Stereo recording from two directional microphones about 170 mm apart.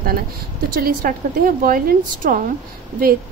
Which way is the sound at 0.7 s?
55° right (ahead or behind).